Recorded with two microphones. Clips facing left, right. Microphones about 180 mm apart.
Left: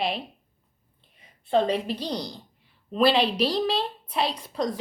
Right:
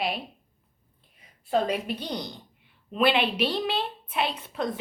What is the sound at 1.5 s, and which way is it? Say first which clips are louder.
Speech: left 3 dB; 30° left (ahead or behind).